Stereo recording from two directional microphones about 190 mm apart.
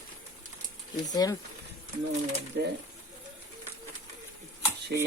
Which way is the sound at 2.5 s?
60° right (ahead or behind).